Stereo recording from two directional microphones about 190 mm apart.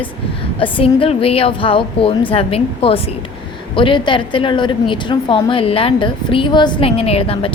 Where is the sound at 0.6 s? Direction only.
30° left (ahead or behind).